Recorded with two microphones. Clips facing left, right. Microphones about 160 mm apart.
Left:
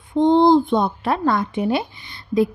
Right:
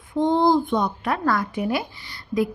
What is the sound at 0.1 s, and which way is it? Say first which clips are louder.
A child's voice: left 5 dB; 25° left (ahead or behind).